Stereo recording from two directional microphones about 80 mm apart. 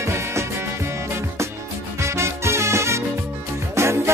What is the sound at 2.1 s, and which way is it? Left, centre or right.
Music, right.